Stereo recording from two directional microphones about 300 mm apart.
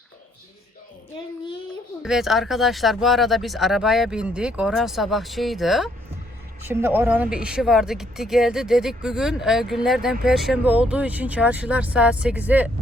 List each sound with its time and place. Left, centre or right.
2.0 s speech: centre